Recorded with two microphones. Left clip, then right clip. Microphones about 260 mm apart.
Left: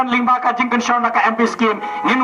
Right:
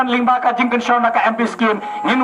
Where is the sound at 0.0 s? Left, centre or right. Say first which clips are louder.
Even; right.